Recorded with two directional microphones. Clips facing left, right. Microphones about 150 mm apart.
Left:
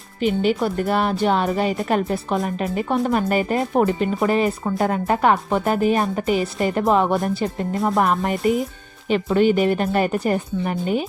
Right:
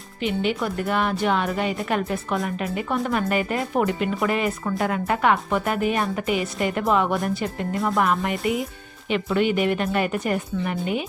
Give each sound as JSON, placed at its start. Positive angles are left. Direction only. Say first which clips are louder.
{"t": 0.2, "sound": "speech", "louder": "left 5 dB", "side_deg": 40}